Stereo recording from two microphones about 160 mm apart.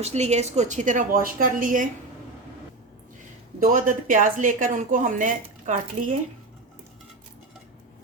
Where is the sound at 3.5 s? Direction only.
60° right (ahead or behind).